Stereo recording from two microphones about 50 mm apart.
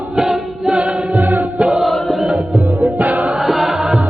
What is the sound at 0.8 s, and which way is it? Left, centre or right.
Music, centre.